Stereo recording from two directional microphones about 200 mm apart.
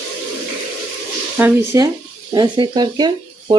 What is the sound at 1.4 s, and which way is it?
Speech, 15° right (ahead or behind).